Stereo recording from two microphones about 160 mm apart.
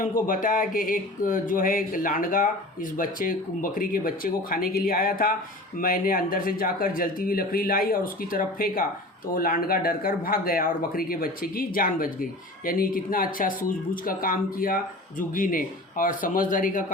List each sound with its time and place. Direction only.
0.0 s speech: 60° left (ahead or behind)